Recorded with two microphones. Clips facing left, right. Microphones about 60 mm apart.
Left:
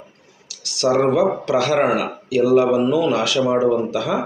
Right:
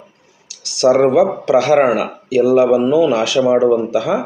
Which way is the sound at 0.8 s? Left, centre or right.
Right.